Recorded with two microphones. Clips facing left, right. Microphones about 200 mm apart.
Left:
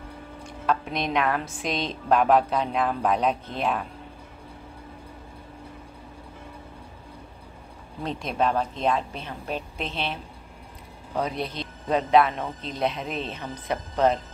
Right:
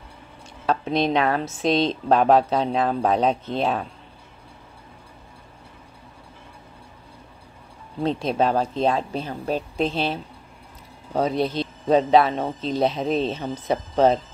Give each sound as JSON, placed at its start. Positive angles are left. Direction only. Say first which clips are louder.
{"t": 0.7, "sound": "a woman's voice", "louder": "right 5 dB", "side_deg": -30}
{"t": 8.0, "sound": "a woman's voice", "louder": "right 5 dB", "side_deg": -30}
{"t": 11.1, "sound": "a woman's voice", "louder": "right 6 dB", "side_deg": -30}